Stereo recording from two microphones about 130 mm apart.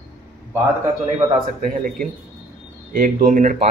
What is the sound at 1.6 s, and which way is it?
A man's voice, 90° right.